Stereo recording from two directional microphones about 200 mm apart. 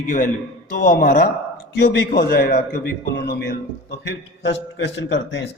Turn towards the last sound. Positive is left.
turn(degrees=65)  # may be behind; listen again after turning